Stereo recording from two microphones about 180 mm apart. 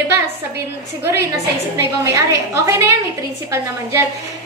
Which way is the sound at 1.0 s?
15° right (ahead or behind).